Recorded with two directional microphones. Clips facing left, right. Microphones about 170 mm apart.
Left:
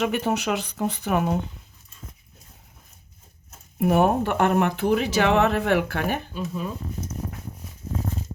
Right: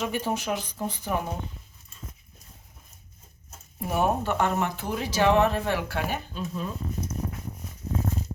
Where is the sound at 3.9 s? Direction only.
60° left (ahead or behind).